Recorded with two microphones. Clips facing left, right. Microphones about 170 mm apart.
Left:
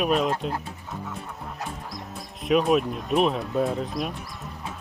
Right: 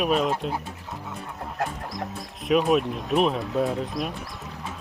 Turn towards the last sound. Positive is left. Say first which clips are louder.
# even
turn(degrees=0)  # may be behind; listen again after turning